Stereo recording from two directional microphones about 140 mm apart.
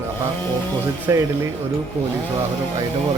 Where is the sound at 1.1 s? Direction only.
20° right (ahead or behind).